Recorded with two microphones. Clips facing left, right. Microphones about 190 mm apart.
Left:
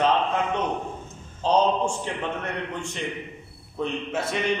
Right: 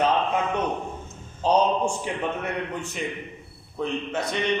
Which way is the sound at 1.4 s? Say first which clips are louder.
Even; 10° right (ahead or behind).